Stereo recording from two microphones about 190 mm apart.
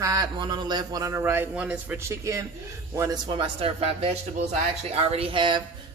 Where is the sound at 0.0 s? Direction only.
20° right (ahead or behind).